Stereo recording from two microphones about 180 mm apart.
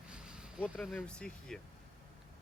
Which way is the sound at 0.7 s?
Centre (ahead or behind).